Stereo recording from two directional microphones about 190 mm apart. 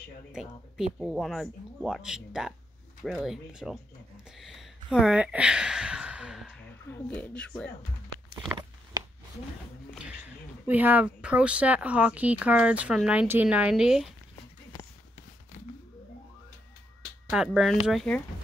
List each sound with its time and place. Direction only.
0.3 s speech: 5° right (ahead or behind)
9.9 s speech: 5° right (ahead or behind)
17.3 s speech: centre (ahead or behind)